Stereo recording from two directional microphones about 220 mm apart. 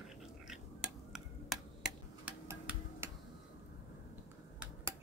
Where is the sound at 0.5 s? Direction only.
Centre (ahead or behind).